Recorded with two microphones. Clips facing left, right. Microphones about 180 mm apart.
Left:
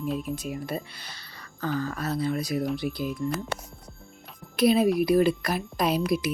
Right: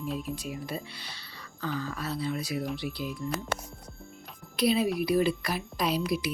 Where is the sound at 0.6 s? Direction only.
45° left (ahead or behind).